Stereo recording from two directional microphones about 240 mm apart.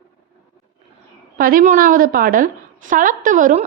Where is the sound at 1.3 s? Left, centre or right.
Right.